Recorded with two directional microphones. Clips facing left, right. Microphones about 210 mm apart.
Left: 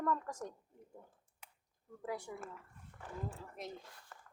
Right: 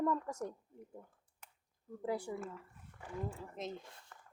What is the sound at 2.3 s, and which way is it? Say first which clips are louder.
Speech: right 5 dB; 25° right (ahead or behind).